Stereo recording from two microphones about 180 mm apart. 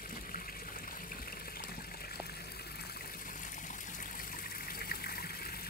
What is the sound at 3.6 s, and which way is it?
Water, 45° left (ahead or behind).